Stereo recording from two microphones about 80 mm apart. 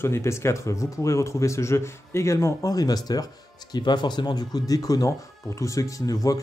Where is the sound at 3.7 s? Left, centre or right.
Left.